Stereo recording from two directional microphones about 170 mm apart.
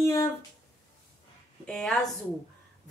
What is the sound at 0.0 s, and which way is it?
Speech, 15° left (ahead or behind).